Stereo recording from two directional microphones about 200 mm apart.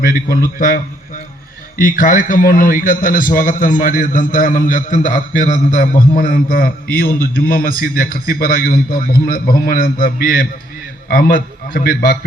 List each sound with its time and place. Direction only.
1.8 s a man's voice: 40° left (ahead or behind)